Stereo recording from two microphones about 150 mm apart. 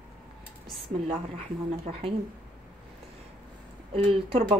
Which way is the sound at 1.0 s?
45° right (ahead or behind).